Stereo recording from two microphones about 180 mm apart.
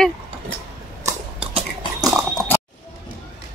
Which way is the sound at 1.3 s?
30° right (ahead or behind).